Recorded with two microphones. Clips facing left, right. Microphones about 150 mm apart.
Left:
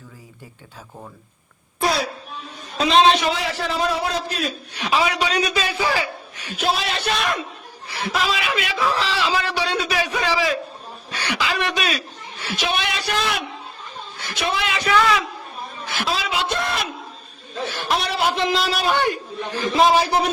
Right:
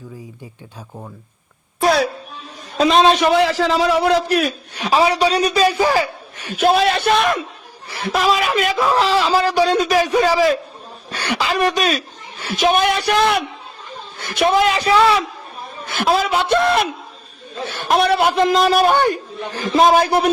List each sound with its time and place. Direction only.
2.7 s a man's voice: 45° right (ahead or behind); by 4.5 s 75° right (ahead or behind)
4.8 s a man's voice: 40° right (ahead or behind)
15.9 s a man's voice: 55° right (ahead or behind)